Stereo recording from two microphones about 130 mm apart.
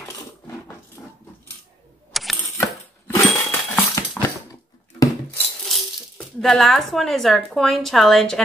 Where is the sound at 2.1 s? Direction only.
Centre (ahead or behind).